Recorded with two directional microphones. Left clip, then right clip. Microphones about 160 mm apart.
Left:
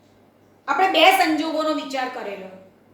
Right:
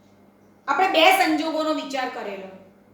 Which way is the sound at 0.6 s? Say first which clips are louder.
Left 1 dB; 10° right (ahead or behind).